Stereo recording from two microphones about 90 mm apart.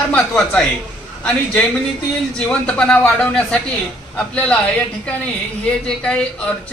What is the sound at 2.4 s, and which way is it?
A woman's voice, 10° left (ahead or behind).